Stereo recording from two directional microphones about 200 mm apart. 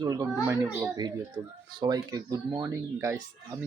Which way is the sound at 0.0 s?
15° right (ahead or behind).